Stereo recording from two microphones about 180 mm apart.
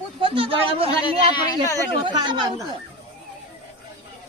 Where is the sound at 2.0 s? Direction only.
25° right (ahead or behind).